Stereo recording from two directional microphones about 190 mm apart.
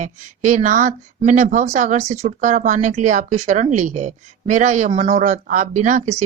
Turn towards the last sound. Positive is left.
turn(degrees=-35)  # may be behind; listen again after turning